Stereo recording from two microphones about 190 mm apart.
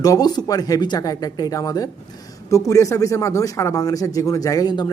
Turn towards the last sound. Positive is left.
turn(degrees=20)  # may be behind; listen again after turning